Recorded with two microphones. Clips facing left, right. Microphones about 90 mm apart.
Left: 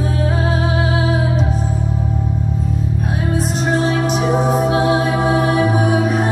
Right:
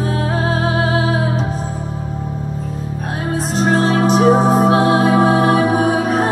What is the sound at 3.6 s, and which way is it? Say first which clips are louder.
Music: right 4 dB; 40° right (ahead or behind).